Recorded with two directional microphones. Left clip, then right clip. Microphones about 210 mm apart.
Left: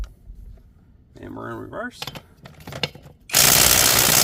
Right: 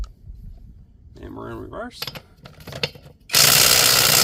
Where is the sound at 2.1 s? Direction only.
10° left (ahead or behind).